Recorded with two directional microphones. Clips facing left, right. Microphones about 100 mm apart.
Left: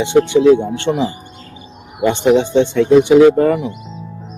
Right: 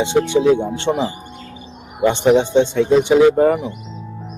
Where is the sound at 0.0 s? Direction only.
20° right (ahead or behind).